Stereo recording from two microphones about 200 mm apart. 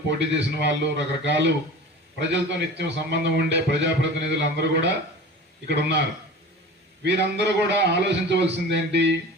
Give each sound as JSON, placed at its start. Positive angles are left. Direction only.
{"t": 0.1, "sound": "a man's voice", "side_deg": -60}
{"t": 7.0, "sound": "a man's voice", "side_deg": -60}